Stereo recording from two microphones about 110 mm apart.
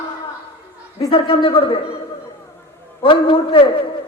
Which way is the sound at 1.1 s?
55° left (ahead or behind).